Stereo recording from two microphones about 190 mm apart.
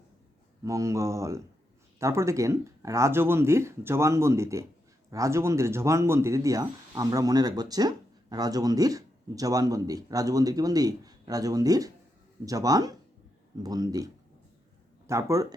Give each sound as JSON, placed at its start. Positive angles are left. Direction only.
{"t": 0.6, "sound": "speech", "side_deg": -15}